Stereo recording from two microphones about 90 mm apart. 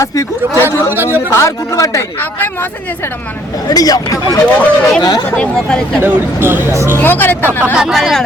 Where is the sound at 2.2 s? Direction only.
25° left (ahead or behind).